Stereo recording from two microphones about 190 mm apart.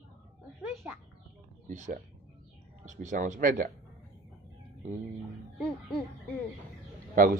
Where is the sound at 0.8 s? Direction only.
10° right (ahead or behind).